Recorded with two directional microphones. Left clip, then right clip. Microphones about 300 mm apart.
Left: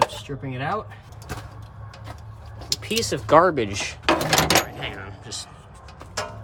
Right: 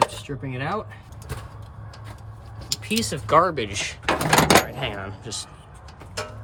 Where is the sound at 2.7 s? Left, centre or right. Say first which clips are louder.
Left 2 dB; left; by 4.1 s centre.